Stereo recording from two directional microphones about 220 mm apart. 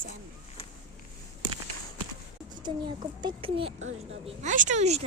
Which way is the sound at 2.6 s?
20° right (ahead or behind).